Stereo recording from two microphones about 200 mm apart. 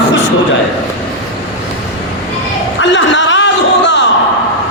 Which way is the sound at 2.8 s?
65° left (ahead or behind).